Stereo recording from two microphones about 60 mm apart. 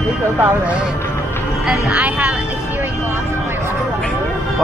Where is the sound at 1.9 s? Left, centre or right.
Right.